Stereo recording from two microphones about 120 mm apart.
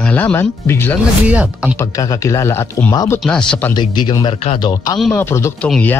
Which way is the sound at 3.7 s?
35° left (ahead or behind).